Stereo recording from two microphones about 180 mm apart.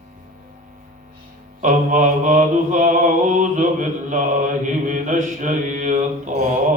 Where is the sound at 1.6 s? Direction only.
45° right (ahead or behind).